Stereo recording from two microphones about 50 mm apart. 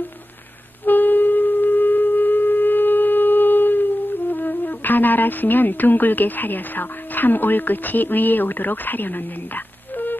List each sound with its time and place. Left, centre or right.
0.8 s wind instrument: left
4.3 s speech: left